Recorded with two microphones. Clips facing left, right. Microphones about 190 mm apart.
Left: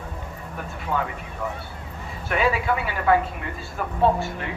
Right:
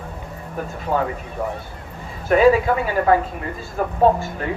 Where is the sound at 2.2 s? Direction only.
40° right (ahead or behind).